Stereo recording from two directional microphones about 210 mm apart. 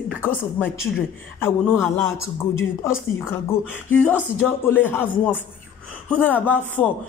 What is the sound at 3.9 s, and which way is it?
A man's voice, 10° left (ahead or behind).